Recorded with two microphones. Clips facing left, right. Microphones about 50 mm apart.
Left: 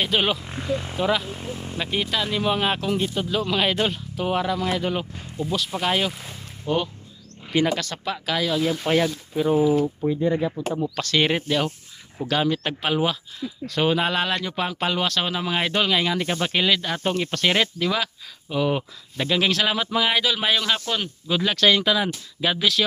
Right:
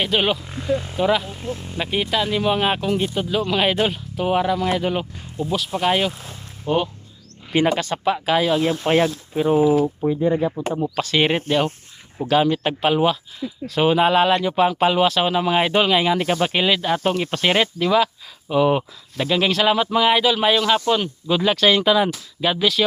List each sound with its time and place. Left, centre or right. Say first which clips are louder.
0.0 s speech: right 2 dB; centre
0.4 s speech: even; centre
0.9 s speech: right 2 dB; centre
1.8 s speech: right 4 dB; centre
7.5 s speech: right 3 dB; right
9.7 s speech: right 3 dB; right
10.1 s speech: right 3 dB; centre
11.4 s speech: right 4 dB; right
12.3 s speech: right 5 dB; centre
18.4 s speech: right 6 dB; centre
19.1 s speech: right 2 dB; centre